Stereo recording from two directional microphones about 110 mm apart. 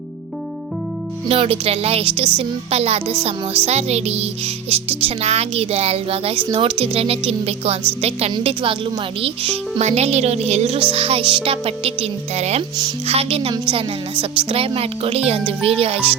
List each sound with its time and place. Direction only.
1.3 s music: 60° right (ahead or behind)
8.4 s music: 55° right (ahead or behind); by 12.6 s 80° right
13.1 s music: 65° right (ahead or behind)
13.5 s music: 50° right (ahead or behind)